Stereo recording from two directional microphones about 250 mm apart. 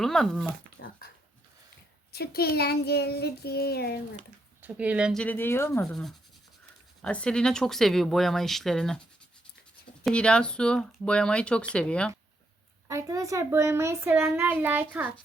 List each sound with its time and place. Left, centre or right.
0.0 s speech: centre
0.8 s dog: left
2.1 s child singing: left
4.6 s speech: centre
10.1 s speech: centre
12.9 s speech: centre